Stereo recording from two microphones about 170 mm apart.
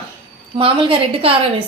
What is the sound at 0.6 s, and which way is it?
Speech, 30° right (ahead or behind).